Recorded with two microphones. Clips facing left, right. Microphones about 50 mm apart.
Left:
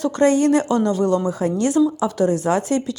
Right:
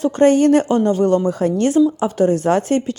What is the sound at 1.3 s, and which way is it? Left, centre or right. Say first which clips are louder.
Speech: right 3 dB; right.